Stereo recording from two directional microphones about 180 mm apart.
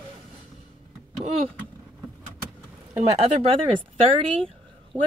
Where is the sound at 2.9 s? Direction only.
35° right (ahead or behind).